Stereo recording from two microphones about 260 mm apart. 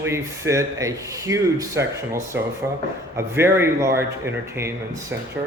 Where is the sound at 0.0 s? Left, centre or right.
Centre.